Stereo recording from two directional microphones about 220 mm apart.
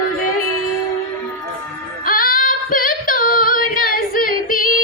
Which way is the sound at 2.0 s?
40° left (ahead or behind).